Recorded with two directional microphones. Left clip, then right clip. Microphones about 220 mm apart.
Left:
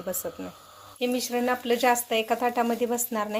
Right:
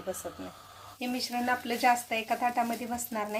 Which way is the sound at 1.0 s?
30° left (ahead or behind).